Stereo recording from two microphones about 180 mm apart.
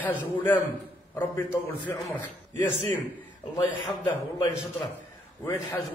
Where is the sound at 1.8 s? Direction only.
10° left (ahead or behind).